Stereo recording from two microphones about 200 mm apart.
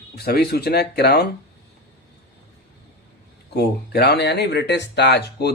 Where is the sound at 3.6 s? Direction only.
55° left (ahead or behind).